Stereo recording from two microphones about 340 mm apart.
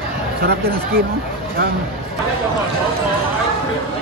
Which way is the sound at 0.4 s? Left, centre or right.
Right.